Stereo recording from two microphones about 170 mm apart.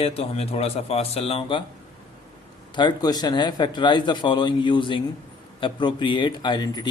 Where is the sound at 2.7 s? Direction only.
25° left (ahead or behind).